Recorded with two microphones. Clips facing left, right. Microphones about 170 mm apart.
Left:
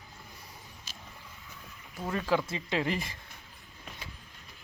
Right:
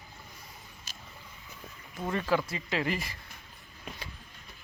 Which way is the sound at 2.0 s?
Centre (ahead or behind).